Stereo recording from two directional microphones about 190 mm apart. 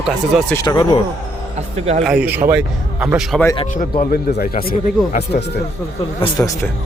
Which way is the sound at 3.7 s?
45° left (ahead or behind).